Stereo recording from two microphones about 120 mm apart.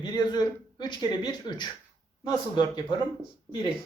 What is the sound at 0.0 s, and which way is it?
Speech, 35° left (ahead or behind).